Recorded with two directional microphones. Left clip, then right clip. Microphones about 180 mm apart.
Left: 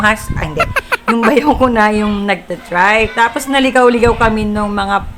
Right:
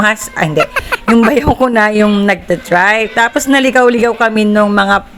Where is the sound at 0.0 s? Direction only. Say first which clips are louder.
Right 2 dB; 35° right (ahead or behind).